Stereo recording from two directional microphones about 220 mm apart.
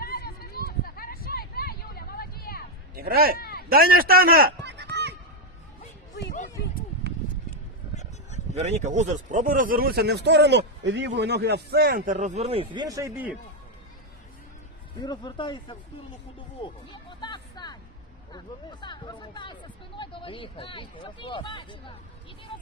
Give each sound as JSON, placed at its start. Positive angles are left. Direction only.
{"t": 0.0, "sound": "a sound", "side_deg": 45}
{"t": 2.9, "sound": "speech", "side_deg": -45}
{"t": 3.3, "sound": "a sound", "side_deg": 45}
{"t": 3.7, "sound": "a man's voice", "side_deg": -40}
{"t": 8.5, "sound": "speech", "side_deg": -30}
{"t": 15.0, "sound": "speech", "side_deg": 20}
{"t": 16.6, "sound": "music", "side_deg": 20}
{"t": 18.3, "sound": "speech", "side_deg": 20}